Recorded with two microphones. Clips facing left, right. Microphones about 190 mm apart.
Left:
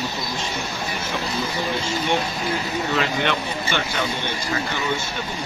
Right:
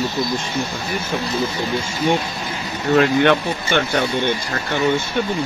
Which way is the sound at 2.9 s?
55° right (ahead or behind).